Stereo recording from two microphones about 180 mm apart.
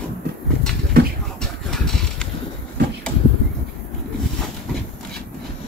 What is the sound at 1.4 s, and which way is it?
Vehicle, 5° left (ahead or behind).